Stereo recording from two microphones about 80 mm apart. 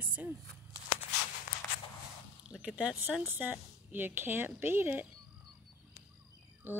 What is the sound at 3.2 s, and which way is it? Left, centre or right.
Speech, right.